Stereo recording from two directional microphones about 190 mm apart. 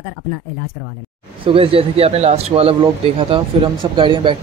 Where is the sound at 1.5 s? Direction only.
30° right (ahead or behind).